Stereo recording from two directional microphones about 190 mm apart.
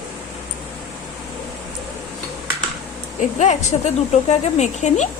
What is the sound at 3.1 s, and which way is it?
A woman's voice, 40° left (ahead or behind).